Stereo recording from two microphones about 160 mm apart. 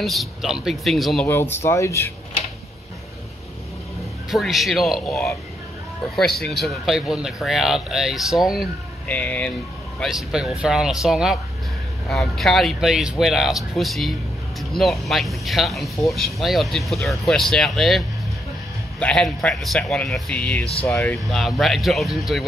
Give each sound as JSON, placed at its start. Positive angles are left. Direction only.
{"t": 0.0, "sound": "speech", "side_deg": 0}
{"t": 1.2, "sound": "speech", "side_deg": 15}
{"t": 4.3, "sound": "speech", "side_deg": 0}
{"t": 9.0, "sound": "speech", "side_deg": 10}
{"t": 9.9, "sound": "speech", "side_deg": 0}